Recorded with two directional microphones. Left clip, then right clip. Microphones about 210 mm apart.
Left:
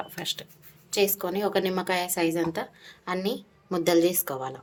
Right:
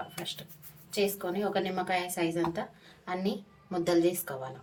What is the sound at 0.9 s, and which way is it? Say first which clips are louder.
A woman's voice: left 5 dB; 55° left (ahead or behind).